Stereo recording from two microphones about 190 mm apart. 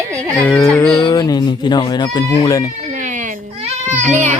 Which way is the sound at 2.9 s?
40° right (ahead or behind).